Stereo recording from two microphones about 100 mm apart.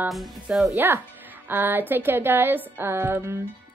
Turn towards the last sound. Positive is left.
turn(degrees=-25)  # may be behind; listen again after turning